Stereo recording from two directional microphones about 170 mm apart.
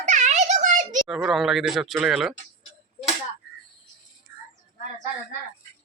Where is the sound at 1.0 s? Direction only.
Centre (ahead or behind).